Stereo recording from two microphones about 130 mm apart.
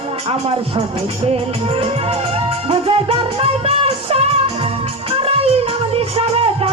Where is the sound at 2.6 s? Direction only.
45° right (ahead or behind).